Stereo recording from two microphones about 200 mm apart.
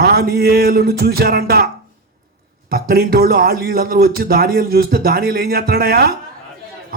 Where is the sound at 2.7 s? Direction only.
45° right (ahead or behind).